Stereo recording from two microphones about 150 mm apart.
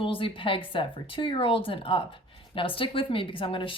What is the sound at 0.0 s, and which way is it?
A woman's voice, 35° left (ahead or behind).